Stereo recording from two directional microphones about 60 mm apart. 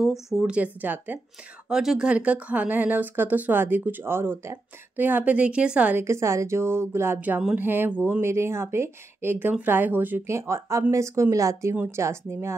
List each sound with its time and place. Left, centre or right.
0.0 s speech: centre
0.5 s speech: right
1.7 s speech: centre
5.9 s speech: right
7.2 s speech: right
8.2 s speech: right
10.2 s speech: right
11.9 s speech: right